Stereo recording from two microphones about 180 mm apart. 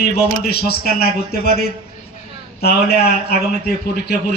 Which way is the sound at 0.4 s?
60° left (ahead or behind).